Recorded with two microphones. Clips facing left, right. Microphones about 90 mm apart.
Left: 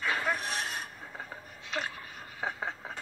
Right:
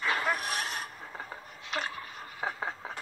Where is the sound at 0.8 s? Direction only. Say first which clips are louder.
Right 1 dB; centre (ahead or behind).